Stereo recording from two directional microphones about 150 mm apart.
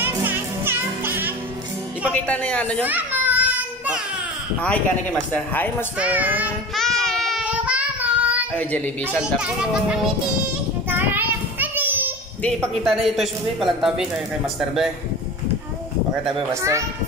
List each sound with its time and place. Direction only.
0.0 s music: 15° right (ahead or behind)
2.1 s speech: 10° left (ahead or behind)
2.8 s children playing: 10° right (ahead or behind)
4.6 s speech: 10° left (ahead or behind)
5.9 s a child's voice: 10° right (ahead or behind)
6.7 s child singing: centre (ahead or behind)
7.4 s child singing: 10° right (ahead or behind)
8.5 s speech: 10° left (ahead or behind)
9.2 s a child's voice: 5° right (ahead or behind)
10.9 s child singing: 15° right (ahead or behind)
12.4 s a man's voice: centre (ahead or behind)